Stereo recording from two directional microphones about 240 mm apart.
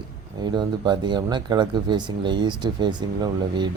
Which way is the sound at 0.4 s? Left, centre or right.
Centre.